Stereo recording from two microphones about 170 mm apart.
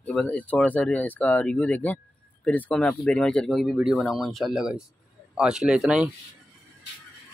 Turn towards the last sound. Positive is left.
turn(degrees=-5)  # may be behind; listen again after turning